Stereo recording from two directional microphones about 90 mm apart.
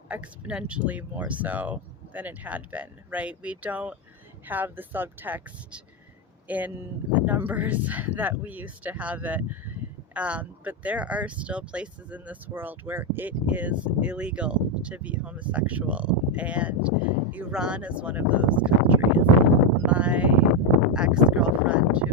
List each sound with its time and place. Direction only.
0.1 s speech: 10° right (ahead or behind)